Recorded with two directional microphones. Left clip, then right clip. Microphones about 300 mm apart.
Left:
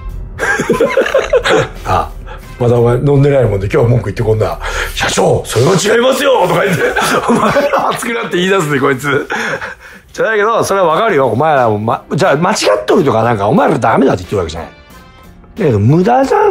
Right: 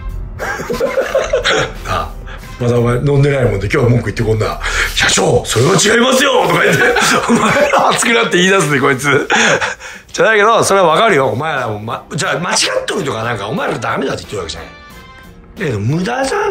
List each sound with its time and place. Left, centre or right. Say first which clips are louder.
0.4 s a sound: left 6 dB; left
2.6 s speech: left 4 dB; centre
11.4 s speech: left 8 dB; centre